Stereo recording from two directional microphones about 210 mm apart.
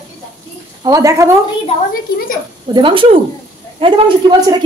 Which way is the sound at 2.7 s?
25° right (ahead or behind).